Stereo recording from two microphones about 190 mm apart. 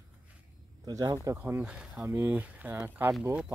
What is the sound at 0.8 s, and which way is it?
Speech, 20° right (ahead or behind).